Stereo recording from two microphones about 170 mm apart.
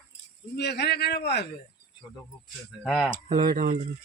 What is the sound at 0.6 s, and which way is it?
Speech, 75° left (ahead or behind).